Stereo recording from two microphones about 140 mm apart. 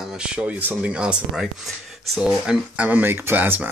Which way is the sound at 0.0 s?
5° right (ahead or behind).